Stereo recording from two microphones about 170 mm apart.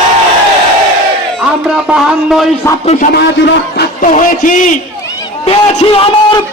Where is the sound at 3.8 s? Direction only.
50° left (ahead or behind).